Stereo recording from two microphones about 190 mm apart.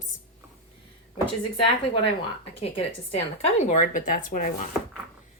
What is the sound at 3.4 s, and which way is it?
Speech, 35° left (ahead or behind).